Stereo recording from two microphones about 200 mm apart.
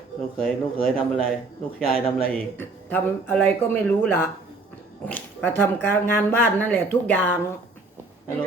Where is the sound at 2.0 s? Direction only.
10° left (ahead or behind).